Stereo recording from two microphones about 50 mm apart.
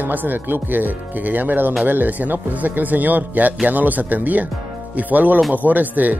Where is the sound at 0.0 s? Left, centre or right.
Right.